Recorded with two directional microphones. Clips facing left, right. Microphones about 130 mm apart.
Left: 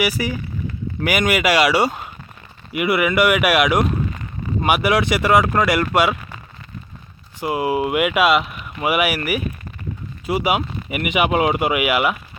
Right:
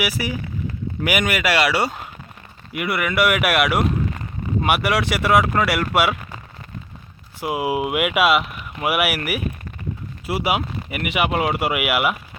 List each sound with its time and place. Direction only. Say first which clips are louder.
0.0 s speech: left 3 dB; 5° right (ahead or behind)
7.3 s speech: left 2 dB; 10° right (ahead or behind)